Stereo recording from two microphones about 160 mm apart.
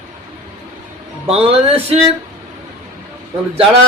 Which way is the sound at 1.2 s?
35° right (ahead or behind).